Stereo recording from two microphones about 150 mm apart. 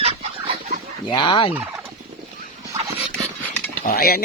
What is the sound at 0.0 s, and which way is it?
Fowl, 40° right (ahead or behind).